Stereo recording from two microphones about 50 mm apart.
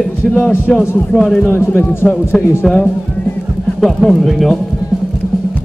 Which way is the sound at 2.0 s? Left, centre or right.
Centre.